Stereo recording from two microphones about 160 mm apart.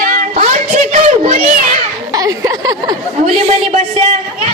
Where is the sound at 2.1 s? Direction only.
20° right (ahead or behind).